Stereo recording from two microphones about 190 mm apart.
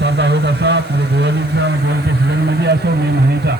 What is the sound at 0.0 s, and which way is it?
Vehicle, 60° right (ahead or behind).